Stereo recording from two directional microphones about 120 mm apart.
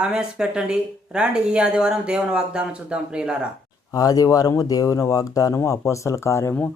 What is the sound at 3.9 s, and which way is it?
Speech, 30° left (ahead or behind).